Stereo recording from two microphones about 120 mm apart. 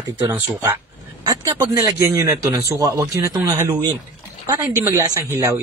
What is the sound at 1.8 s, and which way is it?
Speech, 30° right (ahead or behind).